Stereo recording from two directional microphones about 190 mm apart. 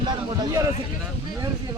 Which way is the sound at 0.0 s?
20° right (ahead or behind).